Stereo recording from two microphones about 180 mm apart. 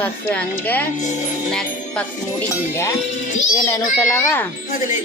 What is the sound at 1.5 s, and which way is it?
Music, centre (ahead or behind).